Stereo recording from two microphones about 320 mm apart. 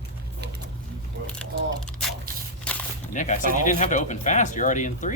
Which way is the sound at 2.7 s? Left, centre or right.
Centre.